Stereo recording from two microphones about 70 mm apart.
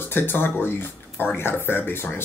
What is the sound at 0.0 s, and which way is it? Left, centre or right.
Speech, left.